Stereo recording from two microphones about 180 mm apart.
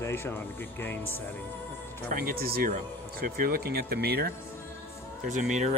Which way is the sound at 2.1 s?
55° right (ahead or behind).